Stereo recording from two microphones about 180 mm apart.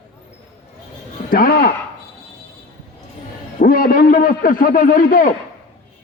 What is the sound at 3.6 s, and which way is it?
A man's voice, 50° left (ahead or behind).